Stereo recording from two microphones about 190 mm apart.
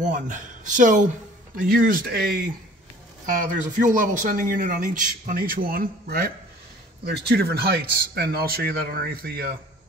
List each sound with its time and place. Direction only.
0.0 s a man's voice: 40° right (ahead or behind)